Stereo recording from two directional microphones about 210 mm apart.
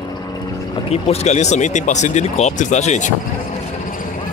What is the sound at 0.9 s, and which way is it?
Speech, 30° left (ahead or behind).